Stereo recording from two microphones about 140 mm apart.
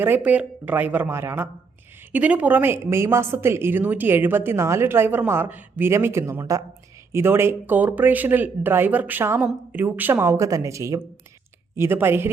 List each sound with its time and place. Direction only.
0.0 s a woman's voice: 15° right (ahead or behind)